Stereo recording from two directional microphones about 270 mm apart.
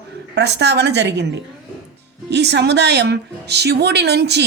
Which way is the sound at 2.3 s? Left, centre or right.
Right.